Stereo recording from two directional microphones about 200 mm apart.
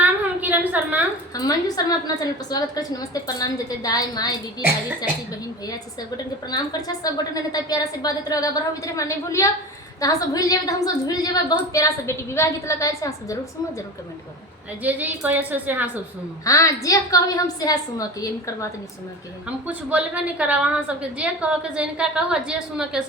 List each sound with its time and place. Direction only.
0.0 s a sound: 10° right (ahead or behind)
1.4 s a woman's voice: 20° left (ahead or behind)
6.5 s a woman's voice: 20° left (ahead or behind)
14.8 s a woman's voice: 10° right (ahead or behind)
16.4 s a woman's voice: 15° left (ahead or behind)
19.5 s a woman's voice: 5° right (ahead or behind)